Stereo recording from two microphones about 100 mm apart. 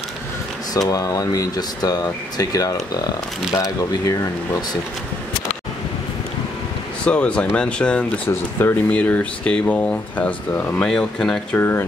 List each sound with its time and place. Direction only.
0.7 s speech: 35° left (ahead or behind)
7.1 s speech: 10° left (ahead or behind)
8.3 s speech: 25° left (ahead or behind)
8.9 s speech: 15° left (ahead or behind)
10.8 s speech: 5° left (ahead or behind)
11.5 s speech: 25° left (ahead or behind)